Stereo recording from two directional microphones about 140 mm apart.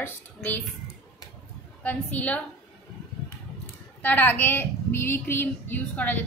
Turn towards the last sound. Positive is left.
turn(degrees=10)  # may be behind; listen again after turning